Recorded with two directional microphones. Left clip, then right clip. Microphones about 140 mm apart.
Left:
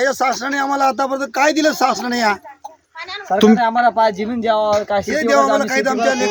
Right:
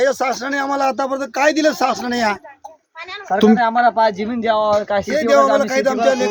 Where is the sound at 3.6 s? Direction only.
25° left (ahead or behind); by 5.0 s centre (ahead or behind).